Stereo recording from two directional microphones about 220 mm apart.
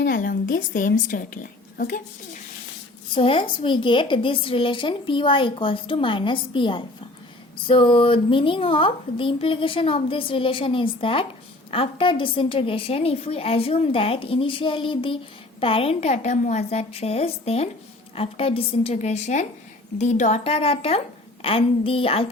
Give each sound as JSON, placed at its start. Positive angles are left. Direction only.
{"t": 0.0, "sound": "a woman's voice", "side_deg": 40}
{"t": 3.2, "sound": "a woman's voice", "side_deg": 25}